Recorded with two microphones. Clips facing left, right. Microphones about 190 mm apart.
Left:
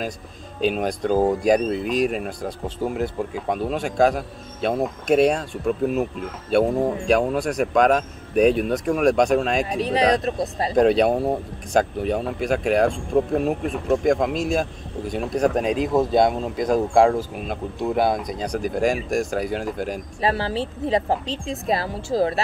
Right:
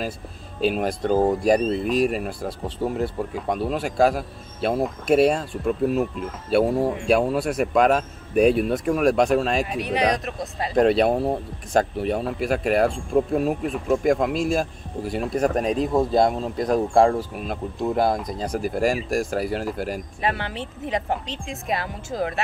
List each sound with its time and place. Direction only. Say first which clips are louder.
0.6 s speech: even; 5° right (ahead or behind)
9.7 s speech: left 3 dB; 30° left (ahead or behind)
10.7 s speech: left 1 dB; centre (ahead or behind)
20.2 s speech: left 6 dB; 35° left (ahead or behind)